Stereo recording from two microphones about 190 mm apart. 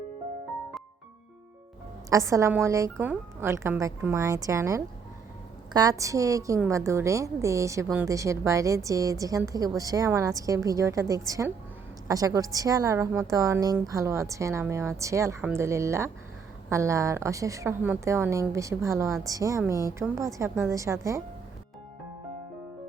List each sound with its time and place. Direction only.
2.0 s a woman's voice: 15° right (ahead or behind)